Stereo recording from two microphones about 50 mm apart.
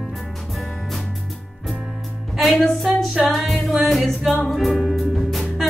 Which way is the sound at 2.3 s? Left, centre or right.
Centre.